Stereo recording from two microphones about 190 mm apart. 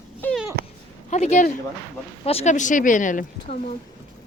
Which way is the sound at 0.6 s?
55° right (ahead or behind).